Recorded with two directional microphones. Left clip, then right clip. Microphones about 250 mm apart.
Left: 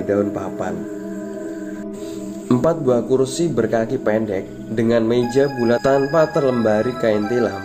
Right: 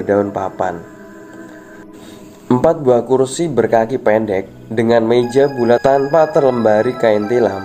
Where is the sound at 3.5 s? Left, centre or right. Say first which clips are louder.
Right 8 dB; centre.